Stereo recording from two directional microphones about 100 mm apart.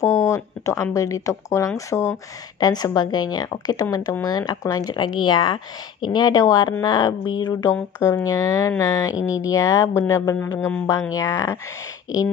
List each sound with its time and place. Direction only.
0.0 s speech: 30° left (ahead or behind)
2.6 s speech: 40° left (ahead or behind)